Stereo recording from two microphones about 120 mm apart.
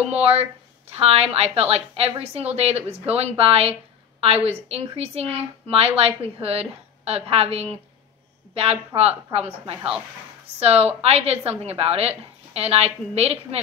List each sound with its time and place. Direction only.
0.1 s a woman's voice: 55° right (ahead or behind)
9.8 s speech: 10° right (ahead or behind)
10.6 s a woman's voice: 55° right (ahead or behind)